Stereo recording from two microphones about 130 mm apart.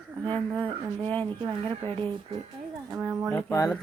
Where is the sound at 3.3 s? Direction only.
25° left (ahead or behind).